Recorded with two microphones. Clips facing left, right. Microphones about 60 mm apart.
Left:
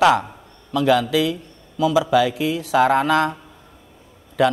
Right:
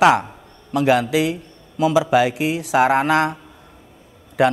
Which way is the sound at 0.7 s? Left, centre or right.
Right.